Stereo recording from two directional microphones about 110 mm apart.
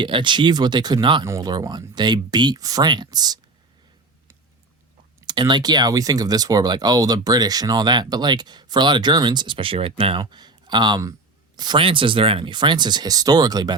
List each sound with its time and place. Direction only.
0.0 s speech: 45° right (ahead or behind)
1.2 s speech: 30° right (ahead or behind)
5.2 s speech: 45° right (ahead or behind)